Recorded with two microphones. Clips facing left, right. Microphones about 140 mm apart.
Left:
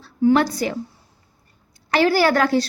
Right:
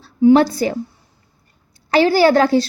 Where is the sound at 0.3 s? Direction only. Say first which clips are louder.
Right 5 dB; 30° right (ahead or behind).